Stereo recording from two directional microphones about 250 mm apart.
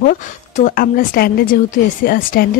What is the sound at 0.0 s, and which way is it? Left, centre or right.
A woman's voice, left.